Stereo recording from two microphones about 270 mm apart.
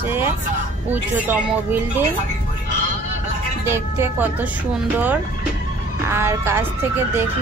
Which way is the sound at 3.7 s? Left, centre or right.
Centre.